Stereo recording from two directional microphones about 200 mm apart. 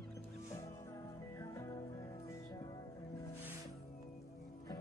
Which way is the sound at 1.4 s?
15° left (ahead or behind).